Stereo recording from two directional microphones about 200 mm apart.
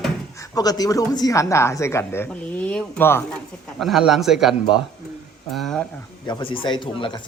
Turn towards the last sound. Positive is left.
turn(degrees=25)  # may be behind; listen again after turning